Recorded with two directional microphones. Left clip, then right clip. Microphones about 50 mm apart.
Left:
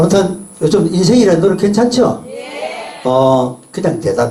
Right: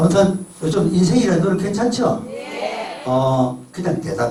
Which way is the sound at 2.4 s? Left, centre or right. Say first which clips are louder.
Left 2 dB; centre.